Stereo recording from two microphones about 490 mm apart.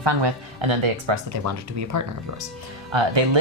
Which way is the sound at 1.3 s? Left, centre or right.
Right.